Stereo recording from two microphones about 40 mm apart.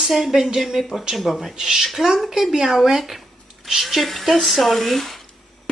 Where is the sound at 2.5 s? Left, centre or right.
Centre.